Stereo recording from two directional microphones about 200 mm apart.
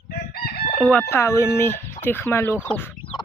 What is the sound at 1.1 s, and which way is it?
Speech, 15° left (ahead or behind).